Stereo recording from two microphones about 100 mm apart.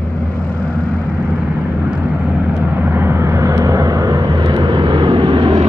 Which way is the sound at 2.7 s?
25° right (ahead or behind).